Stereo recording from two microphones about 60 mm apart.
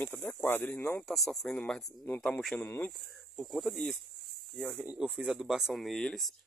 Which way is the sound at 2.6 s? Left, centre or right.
Left.